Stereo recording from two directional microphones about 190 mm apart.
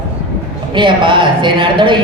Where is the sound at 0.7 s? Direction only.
25° right (ahead or behind).